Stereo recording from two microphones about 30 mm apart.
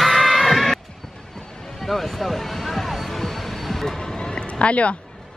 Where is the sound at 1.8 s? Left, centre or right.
Centre.